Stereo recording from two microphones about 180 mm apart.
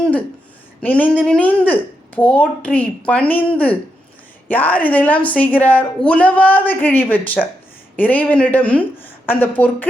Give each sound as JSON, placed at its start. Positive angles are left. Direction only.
{"t": 0.8, "sound": "speech", "side_deg": 10}